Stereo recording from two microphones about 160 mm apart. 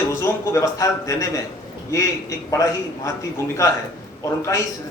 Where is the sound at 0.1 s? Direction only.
15° left (ahead or behind).